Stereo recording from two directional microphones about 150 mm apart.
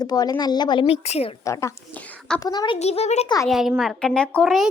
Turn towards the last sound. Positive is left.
turn(degrees=0)  # may be behind; listen again after turning